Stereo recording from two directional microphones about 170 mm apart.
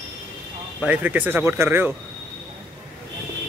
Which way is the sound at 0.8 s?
10° right (ahead or behind).